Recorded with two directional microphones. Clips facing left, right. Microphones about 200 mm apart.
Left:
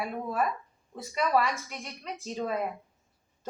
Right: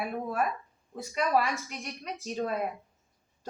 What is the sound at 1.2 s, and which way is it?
Speech, 15° right (ahead or behind).